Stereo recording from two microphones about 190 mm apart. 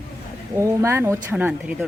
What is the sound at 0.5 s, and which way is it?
Speech, 15° right (ahead or behind).